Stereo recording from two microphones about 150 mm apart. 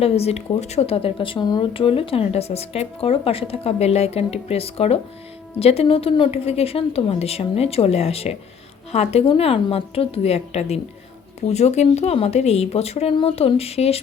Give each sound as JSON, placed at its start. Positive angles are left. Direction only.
{"t": 0.0, "sound": "a woman's voice", "side_deg": 40}